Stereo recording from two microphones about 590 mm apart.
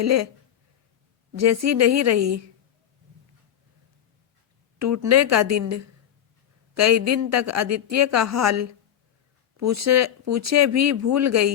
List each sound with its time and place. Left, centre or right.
0.0 s speech: right
1.3 s speech: right
4.8 s speech: right